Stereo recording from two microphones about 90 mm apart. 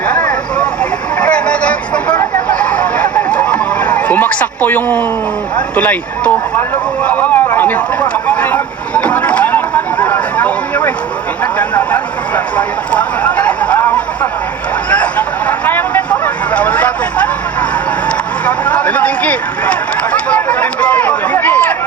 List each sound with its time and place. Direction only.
0.1 s vehicle: 15° left (ahead or behind)
5.7 s a sound: 15° left (ahead or behind)
11.7 s speech: 20° left (ahead or behind)
13.7 s a sound: 20° left (ahead or behind)
18.4 s vehicle: 15° left (ahead or behind)
20.1 s run: 15° left (ahead or behind)